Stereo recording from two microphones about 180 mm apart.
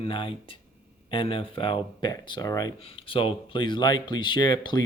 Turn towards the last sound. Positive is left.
turn(degrees=25)  # may be behind; listen again after turning